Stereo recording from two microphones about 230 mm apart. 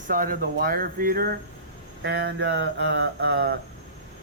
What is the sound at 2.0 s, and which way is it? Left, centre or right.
Mantra, right.